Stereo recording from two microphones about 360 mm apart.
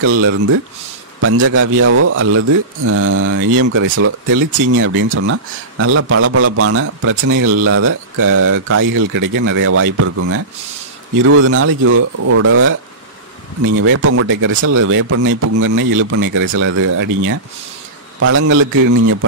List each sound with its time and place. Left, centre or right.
0.0 s speech: right
13.7 s speech: right
18.2 s speech: right